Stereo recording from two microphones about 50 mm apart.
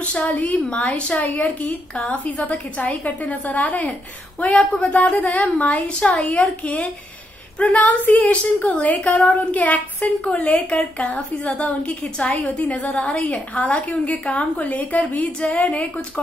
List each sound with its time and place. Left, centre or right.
0.4 s a woman's voice: left